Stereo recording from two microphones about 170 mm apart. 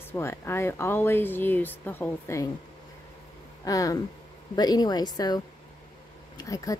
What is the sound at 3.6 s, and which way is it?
A woman's voice, 20° left (ahead or behind).